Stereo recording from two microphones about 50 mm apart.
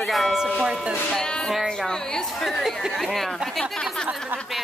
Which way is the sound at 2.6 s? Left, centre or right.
Centre.